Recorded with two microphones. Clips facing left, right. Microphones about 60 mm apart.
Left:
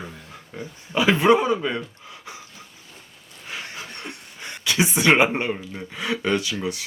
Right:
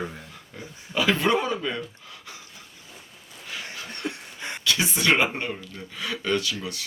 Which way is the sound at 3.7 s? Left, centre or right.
Centre.